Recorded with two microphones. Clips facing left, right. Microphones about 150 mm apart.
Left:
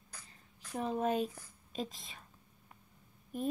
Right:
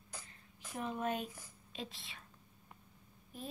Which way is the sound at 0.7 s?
35° left (ahead or behind).